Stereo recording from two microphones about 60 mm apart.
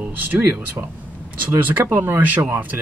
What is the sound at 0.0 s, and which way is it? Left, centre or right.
Speech, right.